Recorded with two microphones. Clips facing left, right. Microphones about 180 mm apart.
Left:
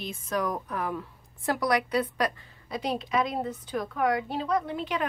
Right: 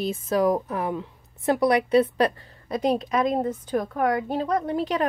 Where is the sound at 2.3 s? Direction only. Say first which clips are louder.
Right 6 dB; 50° right (ahead or behind).